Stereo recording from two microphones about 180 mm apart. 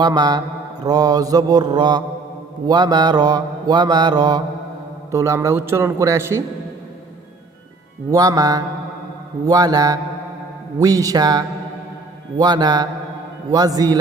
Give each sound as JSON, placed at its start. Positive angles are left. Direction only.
{"t": 0.0, "sound": "mantra", "side_deg": -20}
{"t": 5.1, "sound": "a man's voice", "side_deg": -15}
{"t": 8.1, "sound": "mantra", "side_deg": -20}